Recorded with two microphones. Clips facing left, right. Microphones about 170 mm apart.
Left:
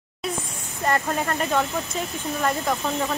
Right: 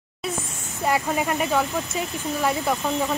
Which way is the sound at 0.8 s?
10° right (ahead or behind).